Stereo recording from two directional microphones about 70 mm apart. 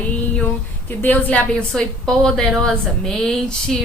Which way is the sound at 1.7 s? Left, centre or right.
Centre.